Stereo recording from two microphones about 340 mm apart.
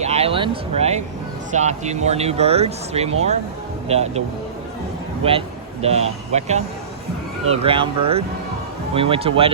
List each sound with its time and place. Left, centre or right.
0.0 s speech: centre
5.8 s speech: centre